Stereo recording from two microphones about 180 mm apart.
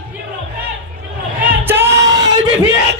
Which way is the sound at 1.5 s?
10° right (ahead or behind).